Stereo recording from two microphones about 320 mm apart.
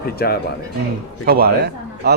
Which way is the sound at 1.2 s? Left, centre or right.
Right.